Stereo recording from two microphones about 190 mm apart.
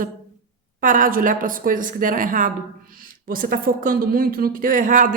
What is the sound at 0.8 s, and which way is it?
Speech, 45° right (ahead or behind).